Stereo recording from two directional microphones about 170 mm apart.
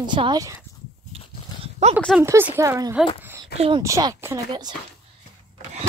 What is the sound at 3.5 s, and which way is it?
Speech, 35° right (ahead or behind).